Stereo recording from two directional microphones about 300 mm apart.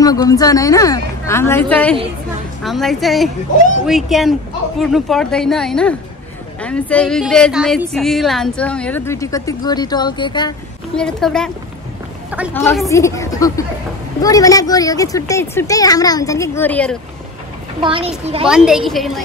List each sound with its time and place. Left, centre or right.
0.0 s a woman's voice: centre
11.0 s a woman's voice: centre
12.5 s speech: centre
17.8 s a child's voice: centre
18.5 s a woman's voice: centre